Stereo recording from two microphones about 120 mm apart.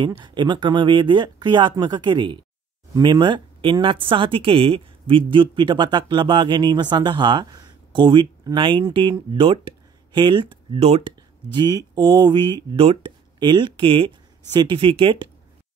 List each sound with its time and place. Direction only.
0.0 s speech: 40° right (ahead or behind)
11.5 s speech: 35° right (ahead or behind)